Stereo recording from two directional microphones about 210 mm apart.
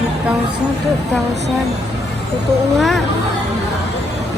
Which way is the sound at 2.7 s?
Centre (ahead or behind).